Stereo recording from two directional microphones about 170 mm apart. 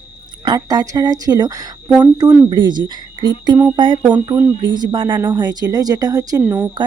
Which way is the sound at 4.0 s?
10° right (ahead or behind).